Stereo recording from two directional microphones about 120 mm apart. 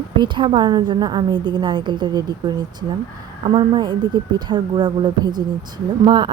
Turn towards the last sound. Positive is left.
turn(degrees=-40)  # may be behind; listen again after turning